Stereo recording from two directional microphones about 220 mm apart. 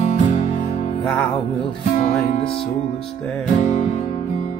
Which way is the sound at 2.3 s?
25° left (ahead or behind).